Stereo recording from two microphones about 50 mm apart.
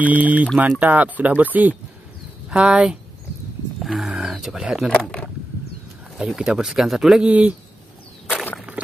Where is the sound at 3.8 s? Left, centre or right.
Centre.